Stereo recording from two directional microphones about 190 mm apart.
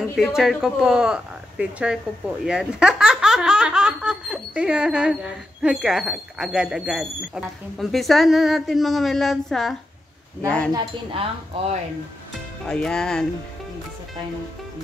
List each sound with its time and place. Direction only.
0.4 s a woman's voice: centre (ahead or behind)
10.7 s speech: 30° right (ahead or behind)
12.6 s a woman's voice: 5° left (ahead or behind)